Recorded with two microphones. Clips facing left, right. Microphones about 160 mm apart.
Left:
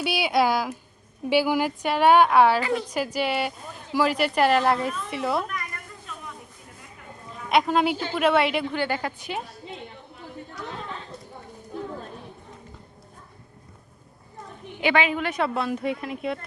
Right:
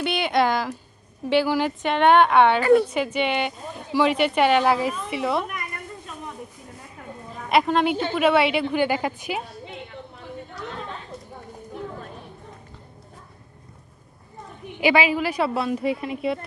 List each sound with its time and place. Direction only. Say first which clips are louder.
0.0 s a woman's voice: right 1 dB; 5° left (ahead or behind)
2.6 s a woman's voice: right 9 dB; 50° right (ahead or behind)
2.9 s a woman's voice: right 2 dB; 5° left (ahead or behind)
7.5 s a woman's voice: right 1 dB; centre (ahead or behind)
8.7 s a woman's voice: right 5 dB; 15° right (ahead or behind)
14.8 s a woman's voice: right 3 dB; 10° right (ahead or behind)